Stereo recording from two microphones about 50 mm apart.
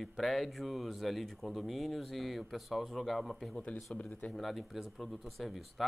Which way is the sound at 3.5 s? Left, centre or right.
Left.